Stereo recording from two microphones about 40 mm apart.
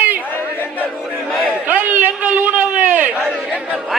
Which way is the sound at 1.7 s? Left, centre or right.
Right.